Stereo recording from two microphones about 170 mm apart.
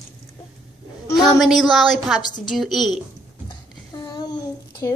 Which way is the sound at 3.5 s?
25° left (ahead or behind).